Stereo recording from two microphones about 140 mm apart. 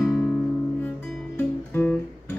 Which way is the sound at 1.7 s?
10° left (ahead or behind).